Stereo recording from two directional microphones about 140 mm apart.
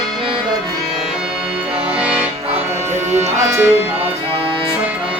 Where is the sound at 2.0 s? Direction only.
10° right (ahead or behind).